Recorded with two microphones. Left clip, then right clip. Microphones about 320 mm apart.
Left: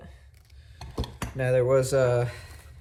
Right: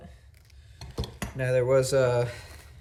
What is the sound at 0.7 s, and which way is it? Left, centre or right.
Dishes, centre.